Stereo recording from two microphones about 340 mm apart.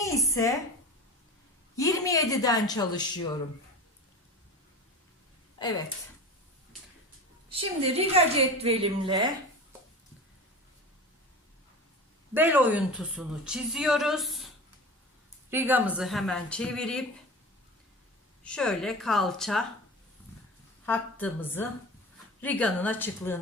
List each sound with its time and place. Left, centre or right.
0.0 s a woman's voice: centre
1.7 s a woman's voice: centre
5.5 s speech: centre
7.6 s a woman's voice: centre
12.3 s a woman's voice: centre
18.4 s a woman's voice: centre
20.8 s a woman's voice: centre